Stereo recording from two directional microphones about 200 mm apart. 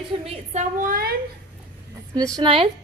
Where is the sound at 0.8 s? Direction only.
45° right (ahead or behind).